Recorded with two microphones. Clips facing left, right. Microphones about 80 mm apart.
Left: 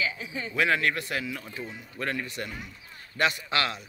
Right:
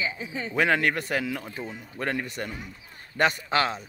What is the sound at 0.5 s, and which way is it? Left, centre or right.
Speech, right.